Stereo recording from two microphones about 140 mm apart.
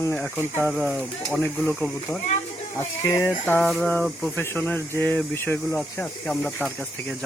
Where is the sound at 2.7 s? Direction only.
20° left (ahead or behind).